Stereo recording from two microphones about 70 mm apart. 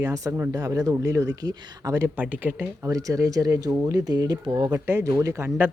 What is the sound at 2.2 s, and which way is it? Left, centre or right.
Speech, right.